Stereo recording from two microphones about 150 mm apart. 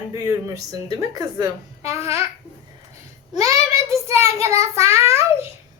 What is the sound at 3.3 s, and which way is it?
A child's voice, 20° right (ahead or behind).